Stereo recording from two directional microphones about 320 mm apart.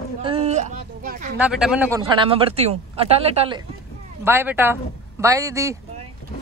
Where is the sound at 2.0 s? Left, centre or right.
Centre.